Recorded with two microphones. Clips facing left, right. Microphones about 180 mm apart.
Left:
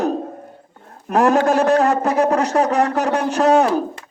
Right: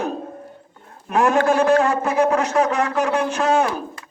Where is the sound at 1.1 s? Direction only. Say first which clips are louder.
Left 2 dB; 40° left (ahead or behind).